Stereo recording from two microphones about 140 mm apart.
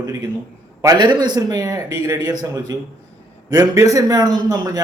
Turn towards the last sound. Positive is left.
turn(degrees=-25)  # may be behind; listen again after turning